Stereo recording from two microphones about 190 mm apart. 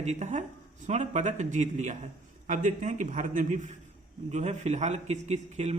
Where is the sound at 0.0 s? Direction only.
35° right (ahead or behind).